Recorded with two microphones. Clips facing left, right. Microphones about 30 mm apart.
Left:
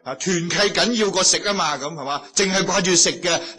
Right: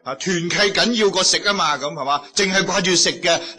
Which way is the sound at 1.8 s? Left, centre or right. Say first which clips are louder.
Right 5 dB; centre.